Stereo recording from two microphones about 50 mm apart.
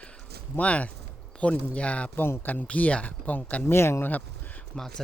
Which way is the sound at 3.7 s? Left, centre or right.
Left.